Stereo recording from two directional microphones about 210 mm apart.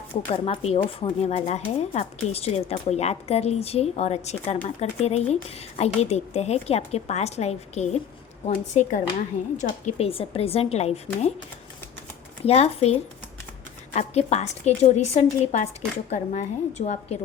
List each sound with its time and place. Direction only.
0.3 s a woman's voice: 25° left (ahead or behind)
12.5 s a woman's voice: 30° left (ahead or behind)